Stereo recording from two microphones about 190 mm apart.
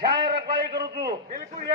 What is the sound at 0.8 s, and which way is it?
Speech, 55° right (ahead or behind).